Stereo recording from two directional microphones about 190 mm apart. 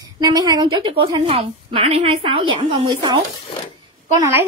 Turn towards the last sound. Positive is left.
turn(degrees=-15)  # may be behind; listen again after turning